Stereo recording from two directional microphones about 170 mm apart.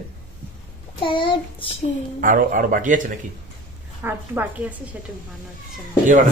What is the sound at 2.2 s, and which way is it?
Speech, 55° right (ahead or behind).